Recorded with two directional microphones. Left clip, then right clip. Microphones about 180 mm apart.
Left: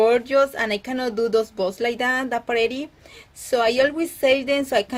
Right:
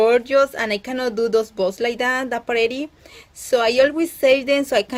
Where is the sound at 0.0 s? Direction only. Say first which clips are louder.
Right 2 dB; 20° right (ahead or behind).